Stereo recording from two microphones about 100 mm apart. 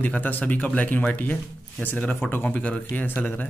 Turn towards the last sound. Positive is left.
turn(degrees=15)  # may be behind; listen again after turning